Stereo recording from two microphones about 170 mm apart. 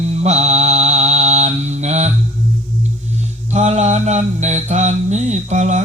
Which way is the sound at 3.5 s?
45° right (ahead or behind).